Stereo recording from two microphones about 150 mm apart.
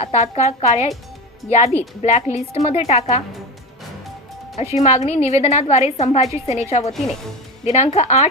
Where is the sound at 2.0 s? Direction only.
45° left (ahead or behind).